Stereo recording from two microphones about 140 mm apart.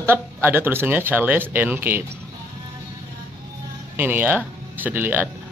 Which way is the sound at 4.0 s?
15° right (ahead or behind).